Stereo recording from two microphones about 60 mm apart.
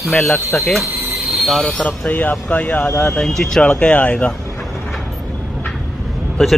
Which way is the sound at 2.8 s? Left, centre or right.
Left.